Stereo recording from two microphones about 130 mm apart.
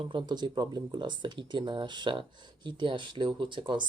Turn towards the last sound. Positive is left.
turn(degrees=-40)  # may be behind; listen again after turning